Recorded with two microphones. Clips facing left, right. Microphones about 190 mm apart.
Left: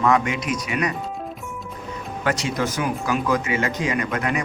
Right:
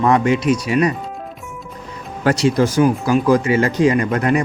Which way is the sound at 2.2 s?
35° right (ahead or behind).